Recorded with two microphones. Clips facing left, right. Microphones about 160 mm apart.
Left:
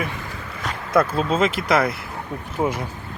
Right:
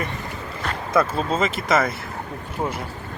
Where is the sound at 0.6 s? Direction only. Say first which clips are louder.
Left 1 dB; centre (ahead or behind).